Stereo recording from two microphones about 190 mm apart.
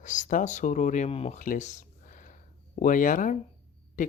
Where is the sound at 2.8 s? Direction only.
45° left (ahead or behind).